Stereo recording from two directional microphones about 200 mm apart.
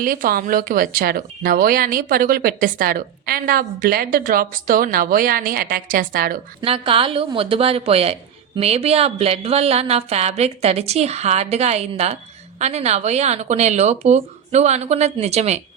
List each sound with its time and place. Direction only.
0.0 s speech: 45° right (ahead or behind)
6.6 s speech: 25° right (ahead or behind)